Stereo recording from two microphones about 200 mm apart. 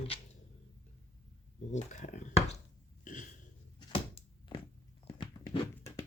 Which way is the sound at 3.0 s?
40° left (ahead or behind).